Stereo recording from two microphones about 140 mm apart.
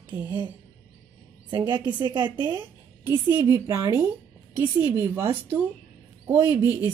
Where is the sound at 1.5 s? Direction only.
30° right (ahead or behind).